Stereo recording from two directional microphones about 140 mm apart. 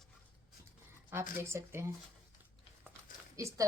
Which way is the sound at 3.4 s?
20° right (ahead or behind).